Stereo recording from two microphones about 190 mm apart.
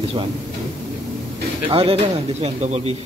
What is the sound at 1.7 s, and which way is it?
A man's voice, 30° right (ahead or behind).